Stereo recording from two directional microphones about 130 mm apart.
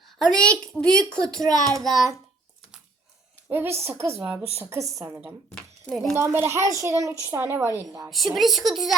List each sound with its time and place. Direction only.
0.2 s a woman's voice: 5° left (ahead or behind)
3.5 s a woman's voice: 20° right (ahead or behind)
5.8 s a woman's voice: 5° left (ahead or behind)
6.1 s a woman's voice: 20° right (ahead or behind)
8.4 s a woman's voice: centre (ahead or behind)